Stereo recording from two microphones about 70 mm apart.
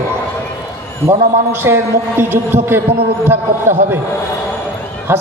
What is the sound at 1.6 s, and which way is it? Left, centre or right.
A man's voice, right.